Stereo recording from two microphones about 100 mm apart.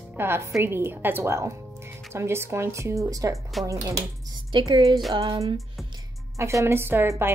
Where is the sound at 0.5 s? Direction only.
25° right (ahead or behind).